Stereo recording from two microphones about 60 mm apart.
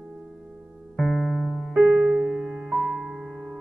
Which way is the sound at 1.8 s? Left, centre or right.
Centre.